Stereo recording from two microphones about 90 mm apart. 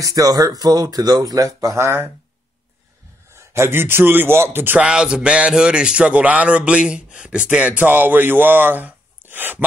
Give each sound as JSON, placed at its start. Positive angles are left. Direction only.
{"t": 0.0, "sound": "speech", "side_deg": -45}
{"t": 3.3, "sound": "a man's voice", "side_deg": -30}
{"t": 4.8, "sound": "speech", "side_deg": -10}